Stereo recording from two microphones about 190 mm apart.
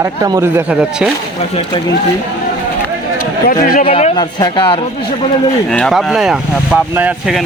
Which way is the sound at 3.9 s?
30° left (ahead or behind).